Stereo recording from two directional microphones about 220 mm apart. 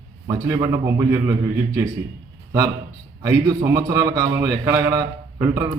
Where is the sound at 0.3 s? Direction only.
15° right (ahead or behind).